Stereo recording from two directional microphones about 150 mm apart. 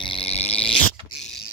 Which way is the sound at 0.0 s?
40° left (ahead or behind).